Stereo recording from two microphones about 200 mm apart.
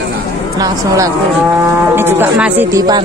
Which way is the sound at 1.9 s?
10° right (ahead or behind).